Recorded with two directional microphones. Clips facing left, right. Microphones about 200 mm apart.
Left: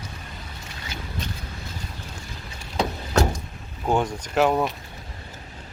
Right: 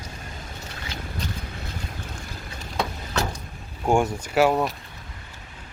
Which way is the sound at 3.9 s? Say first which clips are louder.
Right 2 dB; 10° right (ahead or behind).